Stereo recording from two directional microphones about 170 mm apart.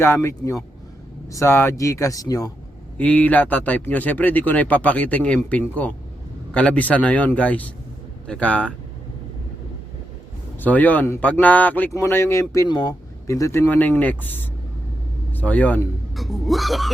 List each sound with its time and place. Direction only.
0.0 s speech: 15° left (ahead or behind)
3.0 s speech: 10° left (ahead or behind)
10.6 s speech: 10° left (ahead or behind)